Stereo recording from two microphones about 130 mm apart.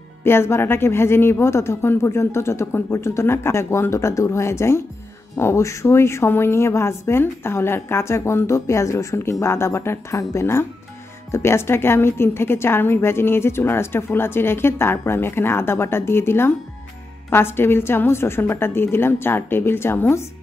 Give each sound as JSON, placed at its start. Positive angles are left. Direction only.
{"t": 0.2, "sound": "a woman's voice", "side_deg": 20}